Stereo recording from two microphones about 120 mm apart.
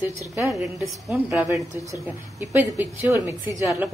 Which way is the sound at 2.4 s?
20° right (ahead or behind).